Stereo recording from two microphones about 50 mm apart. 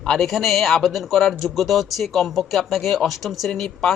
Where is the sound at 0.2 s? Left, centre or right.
Centre.